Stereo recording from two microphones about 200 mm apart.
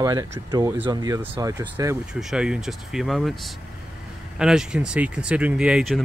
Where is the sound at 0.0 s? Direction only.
20° right (ahead or behind).